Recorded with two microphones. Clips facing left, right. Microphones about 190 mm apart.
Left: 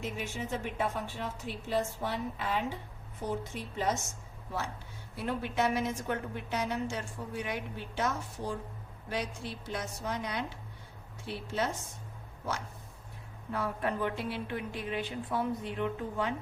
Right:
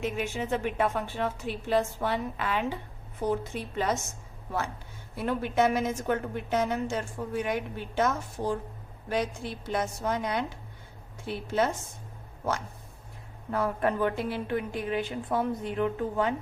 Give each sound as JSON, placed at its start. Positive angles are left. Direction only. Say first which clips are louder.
{"t": 0.0, "sound": "a woman's voice", "louder": "right 6 dB", "side_deg": -70}
{"t": 5.1, "sound": "a woman's voice", "louder": "right 5 dB", "side_deg": -50}
{"t": 13.5, "sound": "a woman's voice", "louder": "right 6 dB", "side_deg": -50}